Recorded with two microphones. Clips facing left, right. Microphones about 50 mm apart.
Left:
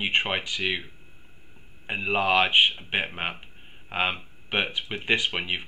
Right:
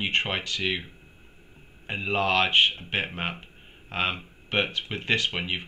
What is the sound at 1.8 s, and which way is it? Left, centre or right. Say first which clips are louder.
Speech: left 1 dB; centre.